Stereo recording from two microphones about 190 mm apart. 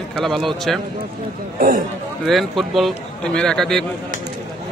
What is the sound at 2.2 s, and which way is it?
A man's voice, centre (ahead or behind).